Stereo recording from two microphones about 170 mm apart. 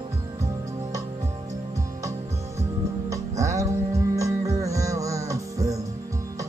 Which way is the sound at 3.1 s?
20° right (ahead or behind).